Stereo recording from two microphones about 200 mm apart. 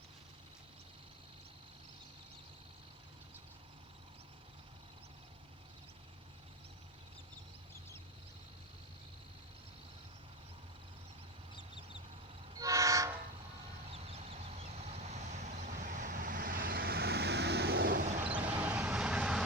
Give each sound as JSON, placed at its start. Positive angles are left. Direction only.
{"t": 12.5, "sound": "train", "side_deg": -15}
{"t": 13.9, "sound": "vehicle", "side_deg": -30}
{"t": 18.3, "sound": "vehicle", "side_deg": -5}